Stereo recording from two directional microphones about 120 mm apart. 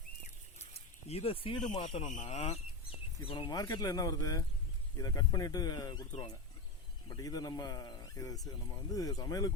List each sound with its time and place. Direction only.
0.7 s a sound: 60° left (ahead or behind)
1.8 s a man's voice: 50° left (ahead or behind)
2.1 s speech: 65° left (ahead or behind)
3.2 s a man's voice: 40° left (ahead or behind)
7.1 s a man's voice: 30° left (ahead or behind)